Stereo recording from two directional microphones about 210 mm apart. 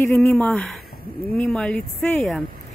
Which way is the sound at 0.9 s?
45° left (ahead or behind).